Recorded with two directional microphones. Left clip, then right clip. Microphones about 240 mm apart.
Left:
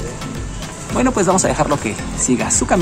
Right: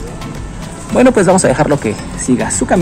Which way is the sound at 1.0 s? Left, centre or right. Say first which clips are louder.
Right 6 dB; centre.